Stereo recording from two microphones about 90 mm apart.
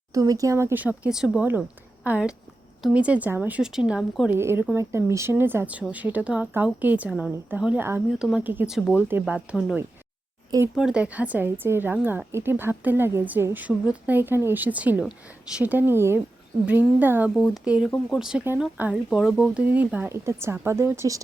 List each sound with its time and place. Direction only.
0.1 s a woman's voice: 40° right (ahead or behind); by 1.1 s 20° right (ahead or behind)
1.1 s a woman's voice: 5° right (ahead or behind); by 3.6 s 20° right (ahead or behind)
3.6 s a woman's voice: 5° right (ahead or behind)
4.3 s a woman's voice: 25° right (ahead or behind); by 9.0 s 5° right (ahead or behind)
9.0 s a woman's voice: 25° right (ahead or behind)
9.2 s a woman's voice: 10° right (ahead or behind)
10.8 s a woman's voice: 10° right (ahead or behind)
17.3 s a woman's voice: centre (ahead or behind)
18.8 s a woman's voice: 15° right (ahead or behind)
19.6 s a woman's voice: 20° right (ahead or behind)
20.1 s a woman's voice: 30° right (ahead or behind)